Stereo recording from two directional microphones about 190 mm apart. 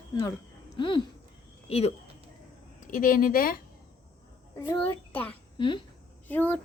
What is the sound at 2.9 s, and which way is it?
Speech, 45° left (ahead or behind).